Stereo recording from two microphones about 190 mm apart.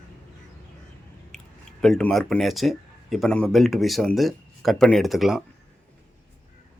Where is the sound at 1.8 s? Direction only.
5° left (ahead or behind).